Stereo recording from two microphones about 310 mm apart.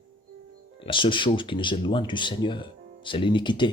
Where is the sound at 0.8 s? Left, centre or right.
Centre.